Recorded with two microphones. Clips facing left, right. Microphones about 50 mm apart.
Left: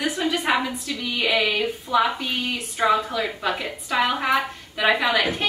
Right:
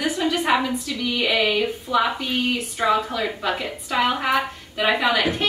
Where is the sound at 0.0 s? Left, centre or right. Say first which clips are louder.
Right 1 dB; centre.